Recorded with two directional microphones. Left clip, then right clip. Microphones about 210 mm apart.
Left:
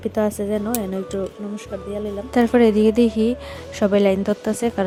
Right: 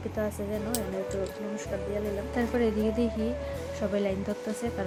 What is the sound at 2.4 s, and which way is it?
Speech, 50° left (ahead or behind).